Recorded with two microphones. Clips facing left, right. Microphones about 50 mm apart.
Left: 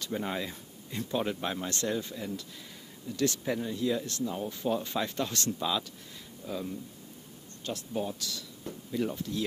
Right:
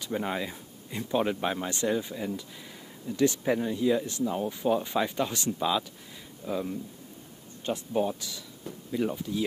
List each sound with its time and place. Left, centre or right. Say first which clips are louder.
0.0 s speech: right 3 dB; centre